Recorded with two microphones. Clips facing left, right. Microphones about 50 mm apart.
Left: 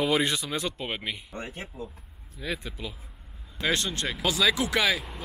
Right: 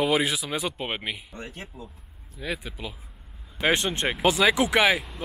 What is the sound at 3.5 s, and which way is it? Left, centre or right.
Speech, right.